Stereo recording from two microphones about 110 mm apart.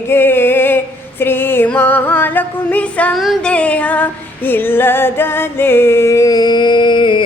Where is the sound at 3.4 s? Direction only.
10° left (ahead or behind).